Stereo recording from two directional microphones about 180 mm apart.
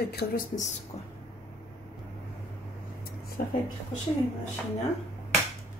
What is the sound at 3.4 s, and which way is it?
Speech, 45° left (ahead or behind).